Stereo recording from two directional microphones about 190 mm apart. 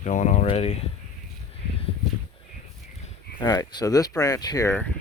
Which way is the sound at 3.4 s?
20° left (ahead or behind).